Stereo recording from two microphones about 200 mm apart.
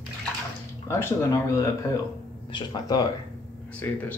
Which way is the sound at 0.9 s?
15° left (ahead or behind).